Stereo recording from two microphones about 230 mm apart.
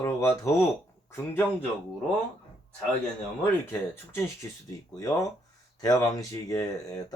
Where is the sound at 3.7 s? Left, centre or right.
Centre.